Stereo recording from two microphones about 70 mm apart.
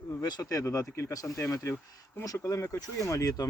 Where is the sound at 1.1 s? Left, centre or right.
Left.